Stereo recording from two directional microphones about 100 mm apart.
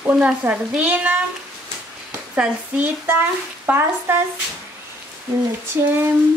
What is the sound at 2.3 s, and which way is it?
Speech, 15° right (ahead or behind).